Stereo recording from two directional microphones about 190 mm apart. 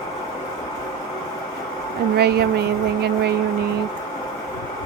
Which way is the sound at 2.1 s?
60° right (ahead or behind).